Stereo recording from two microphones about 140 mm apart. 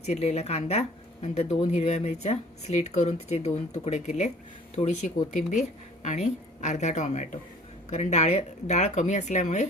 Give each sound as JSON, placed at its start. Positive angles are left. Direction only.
{"t": 0.0, "sound": "a woman's voice", "side_deg": 50}